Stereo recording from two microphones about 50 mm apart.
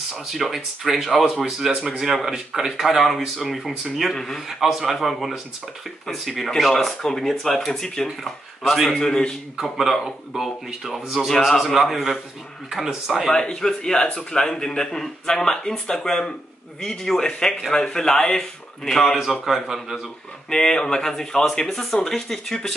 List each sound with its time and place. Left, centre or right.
0.3 s speech: centre
4.5 s speech: centre
9.6 s speech: centre
11.3 s speech: centre
13.6 s speech: centre
19.4 s speech: centre
20.4 s speech: centre